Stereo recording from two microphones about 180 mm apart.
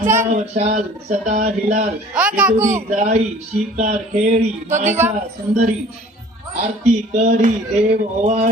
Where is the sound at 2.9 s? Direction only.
40° right (ahead or behind).